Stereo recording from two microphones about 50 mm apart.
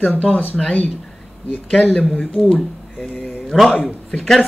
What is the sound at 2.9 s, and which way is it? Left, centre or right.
Speech, centre.